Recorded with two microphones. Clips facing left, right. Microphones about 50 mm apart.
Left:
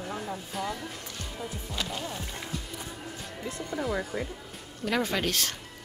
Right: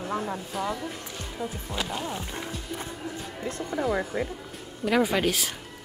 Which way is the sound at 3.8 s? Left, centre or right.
Right.